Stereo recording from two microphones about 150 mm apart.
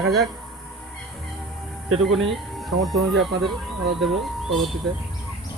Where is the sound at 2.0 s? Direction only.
Centre (ahead or behind).